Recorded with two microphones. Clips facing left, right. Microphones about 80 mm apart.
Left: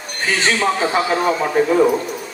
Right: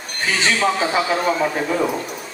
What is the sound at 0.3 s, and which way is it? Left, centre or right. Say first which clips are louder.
Speech: left 1 dB; left.